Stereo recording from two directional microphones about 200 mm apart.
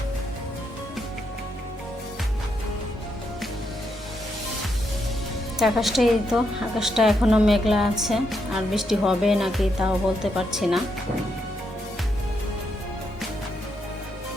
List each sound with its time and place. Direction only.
5.5 s a woman's voice: centre (ahead or behind)